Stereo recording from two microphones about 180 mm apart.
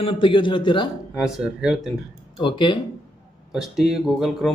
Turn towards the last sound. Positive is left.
turn(degrees=0)  # may be behind; listen again after turning